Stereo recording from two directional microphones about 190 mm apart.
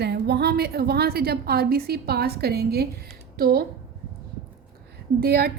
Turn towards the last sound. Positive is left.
turn(degrees=-55)  # may be behind; listen again after turning